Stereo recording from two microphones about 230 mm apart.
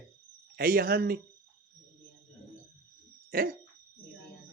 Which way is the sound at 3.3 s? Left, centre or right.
Right.